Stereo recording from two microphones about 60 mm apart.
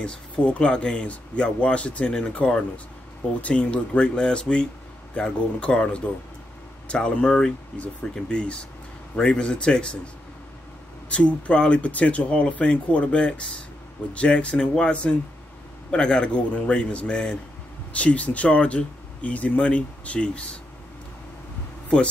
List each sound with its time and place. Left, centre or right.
0.0 s speech: centre
11.1 s speech: left